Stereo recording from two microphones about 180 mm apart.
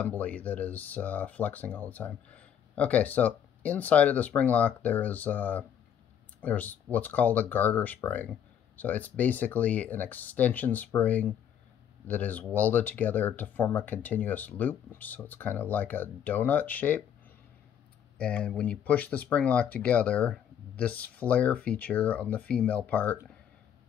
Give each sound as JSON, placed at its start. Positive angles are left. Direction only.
{"t": 0.0, "sound": "speech", "side_deg": 10}
{"t": 18.1, "sound": "speech", "side_deg": 10}